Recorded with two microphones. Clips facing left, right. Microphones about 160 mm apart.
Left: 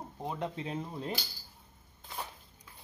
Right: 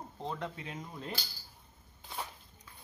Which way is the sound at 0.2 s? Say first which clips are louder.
Left 2 dB; 15° left (ahead or behind).